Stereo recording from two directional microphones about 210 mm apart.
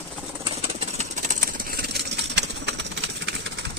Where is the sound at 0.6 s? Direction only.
30° right (ahead or behind).